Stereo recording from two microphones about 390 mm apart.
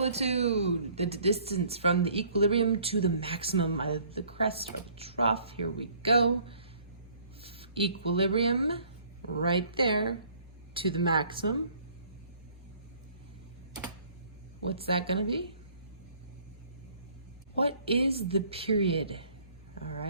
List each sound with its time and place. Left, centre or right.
0.0 s speech: centre
14.7 s speech: centre
17.6 s speech: centre